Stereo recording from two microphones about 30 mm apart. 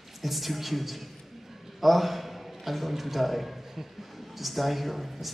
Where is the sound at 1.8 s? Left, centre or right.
Centre.